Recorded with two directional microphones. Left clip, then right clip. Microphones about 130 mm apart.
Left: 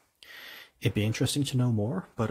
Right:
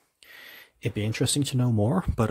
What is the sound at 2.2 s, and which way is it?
Speech, 40° right (ahead or behind).